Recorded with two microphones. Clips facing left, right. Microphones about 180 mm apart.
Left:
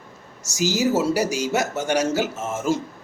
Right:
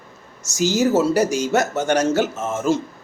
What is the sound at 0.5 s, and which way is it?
A man's voice, 10° left (ahead or behind).